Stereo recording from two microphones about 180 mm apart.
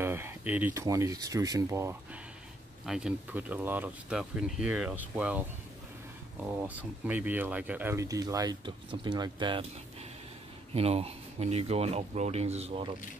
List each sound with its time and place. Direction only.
0.0 s speech: 10° right (ahead or behind)
2.8 s speech: 5° right (ahead or behind)
6.4 s speech: 10° right (ahead or behind); by 9.7 s 25° right (ahead or behind)
10.7 s speech: 35° right (ahead or behind)